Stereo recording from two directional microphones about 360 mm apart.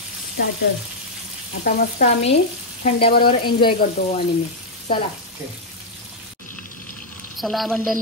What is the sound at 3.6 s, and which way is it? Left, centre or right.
Speech, centre.